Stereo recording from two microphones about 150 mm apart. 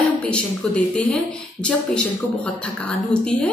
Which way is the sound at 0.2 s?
10° left (ahead or behind).